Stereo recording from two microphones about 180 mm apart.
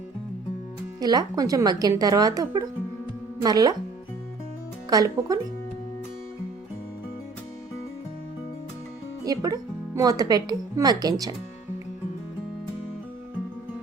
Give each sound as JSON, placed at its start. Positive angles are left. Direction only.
{"t": 0.9, "sound": "speech", "side_deg": -20}
{"t": 4.9, "sound": "speech", "side_deg": -20}
{"t": 9.2, "sound": "speech", "side_deg": -20}